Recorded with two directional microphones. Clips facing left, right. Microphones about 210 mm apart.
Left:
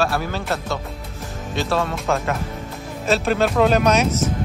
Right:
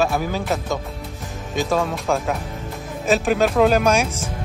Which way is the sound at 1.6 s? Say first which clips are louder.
Right 1 dB; 15° right (ahead or behind).